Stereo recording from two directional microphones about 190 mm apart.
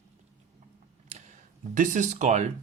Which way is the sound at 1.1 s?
35° right (ahead or behind).